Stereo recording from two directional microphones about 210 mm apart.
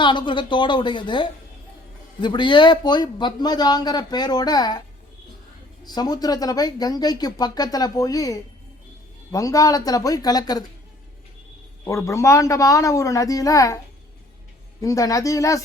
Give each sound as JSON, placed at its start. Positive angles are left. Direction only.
{"t": 0.0, "sound": "a man's voice", "side_deg": 20}
{"t": 5.8, "sound": "a man's voice", "side_deg": 20}
{"t": 11.9, "sound": "speech", "side_deg": 15}
{"t": 14.8, "sound": "speech", "side_deg": 15}